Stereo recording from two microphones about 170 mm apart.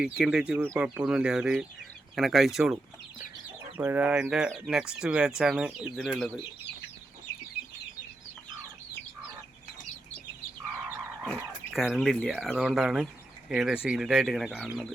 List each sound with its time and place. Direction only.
0.0 s speech: 5° right (ahead or behind)
3.8 s speech: 10° right (ahead or behind)
10.8 s frog: 10° right (ahead or behind)
12.3 s speech: 5° right (ahead or behind)